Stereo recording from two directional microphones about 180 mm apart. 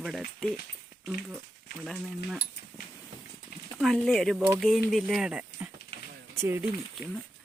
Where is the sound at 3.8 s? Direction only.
Centre (ahead or behind).